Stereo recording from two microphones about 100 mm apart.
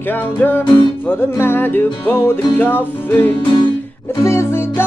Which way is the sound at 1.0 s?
20° left (ahead or behind).